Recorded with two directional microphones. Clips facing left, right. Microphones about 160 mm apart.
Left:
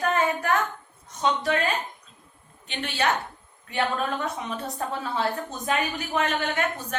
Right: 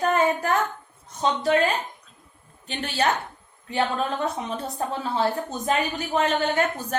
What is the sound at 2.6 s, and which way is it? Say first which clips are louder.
A woman's voice: right 2 dB; 40° right (ahead or behind).